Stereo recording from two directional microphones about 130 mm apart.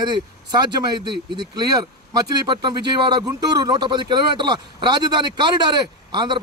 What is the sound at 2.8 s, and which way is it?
A man's voice, 35° right (ahead or behind).